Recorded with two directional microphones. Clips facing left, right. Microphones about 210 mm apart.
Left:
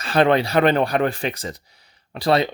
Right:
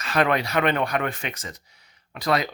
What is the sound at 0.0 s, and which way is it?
Speech, 30° left (ahead or behind).